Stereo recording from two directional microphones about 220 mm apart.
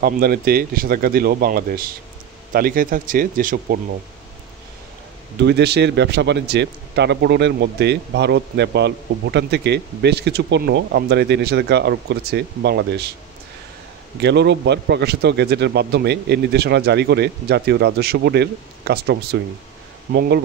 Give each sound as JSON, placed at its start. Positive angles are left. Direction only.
{"t": 0.0, "sound": "a man's voice", "side_deg": -45}
{"t": 5.4, "sound": "a man's voice", "side_deg": -50}
{"t": 14.2, "sound": "a man's voice", "side_deg": -50}